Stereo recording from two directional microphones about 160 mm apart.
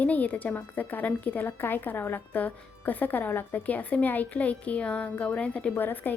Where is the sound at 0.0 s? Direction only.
10° left (ahead or behind).